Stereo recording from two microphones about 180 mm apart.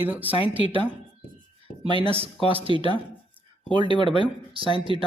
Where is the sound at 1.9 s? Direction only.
30° right (ahead or behind).